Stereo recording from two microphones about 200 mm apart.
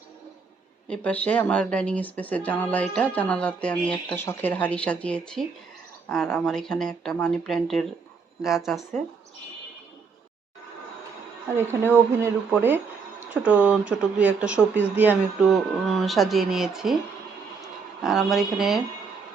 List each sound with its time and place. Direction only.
0.9 s speech: 5° left (ahead or behind)
11.5 s speech: 10° right (ahead or behind)
18.0 s speech: centre (ahead or behind)